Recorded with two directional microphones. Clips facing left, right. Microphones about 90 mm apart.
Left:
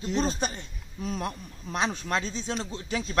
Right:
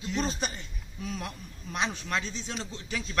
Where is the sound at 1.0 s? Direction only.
40° left (ahead or behind).